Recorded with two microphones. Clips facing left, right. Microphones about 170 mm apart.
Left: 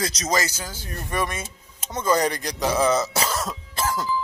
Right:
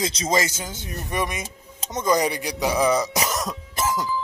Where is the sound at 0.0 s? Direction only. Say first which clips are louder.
Right 2 dB; 25° right (ahead or behind).